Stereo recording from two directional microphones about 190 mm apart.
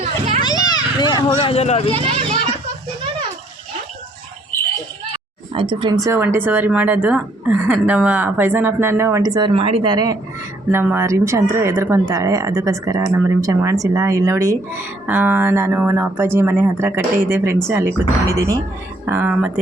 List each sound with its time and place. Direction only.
0.4 s children playing: 20° left (ahead or behind)
1.9 s a child's voice: 30° right (ahead or behind)
5.1 s speech: 25° right (ahead or behind)
10.7 s speech: 10° right (ahead or behind)